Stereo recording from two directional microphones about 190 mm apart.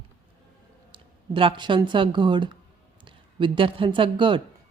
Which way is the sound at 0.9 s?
25° right (ahead or behind).